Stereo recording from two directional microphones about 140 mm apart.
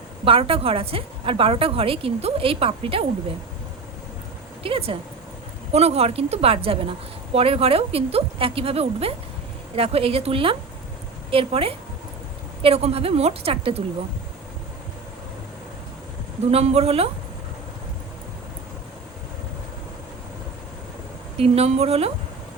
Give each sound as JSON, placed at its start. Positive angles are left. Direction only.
{"t": 0.3, "sound": "a woman's voice", "side_deg": -40}
{"t": 4.6, "sound": "a woman's voice", "side_deg": -40}
{"t": 16.5, "sound": "a woman's voice", "side_deg": -45}
{"t": 21.3, "sound": "a woman's voice", "side_deg": -45}